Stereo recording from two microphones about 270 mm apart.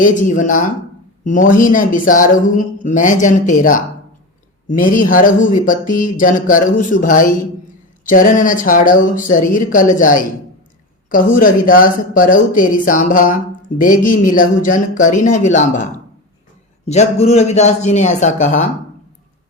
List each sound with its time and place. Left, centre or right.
0.0 s speech: left